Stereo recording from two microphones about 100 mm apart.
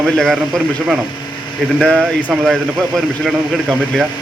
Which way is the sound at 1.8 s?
5° left (ahead or behind).